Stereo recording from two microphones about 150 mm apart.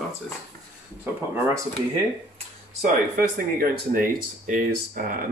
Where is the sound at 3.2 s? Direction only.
70° right (ahead or behind).